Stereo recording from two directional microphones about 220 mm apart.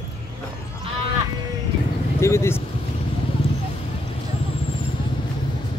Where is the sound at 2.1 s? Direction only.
10° left (ahead or behind).